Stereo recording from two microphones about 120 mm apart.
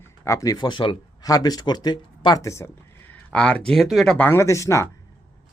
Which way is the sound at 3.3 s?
10° left (ahead or behind).